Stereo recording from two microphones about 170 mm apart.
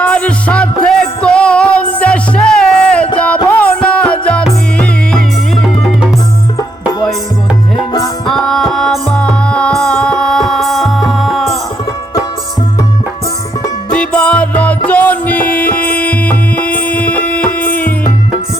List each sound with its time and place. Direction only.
0.0 s music: 5° left (ahead or behind)
8.3 s music: centre (ahead or behind)
13.9 s music: 5° left (ahead or behind)